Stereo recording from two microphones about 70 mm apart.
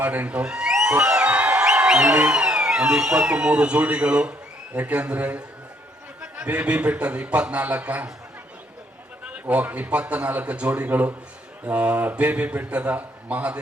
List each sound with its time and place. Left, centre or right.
0.0 s a man's voice: right
9.2 s a man's voice: centre